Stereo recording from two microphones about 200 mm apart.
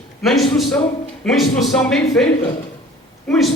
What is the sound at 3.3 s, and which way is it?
Speech, centre (ahead or behind).